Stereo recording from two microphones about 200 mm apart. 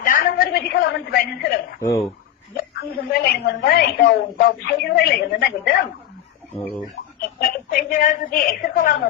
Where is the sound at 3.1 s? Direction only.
50° left (ahead or behind).